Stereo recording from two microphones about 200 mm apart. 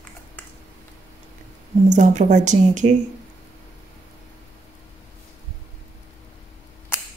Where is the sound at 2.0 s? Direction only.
35° right (ahead or behind).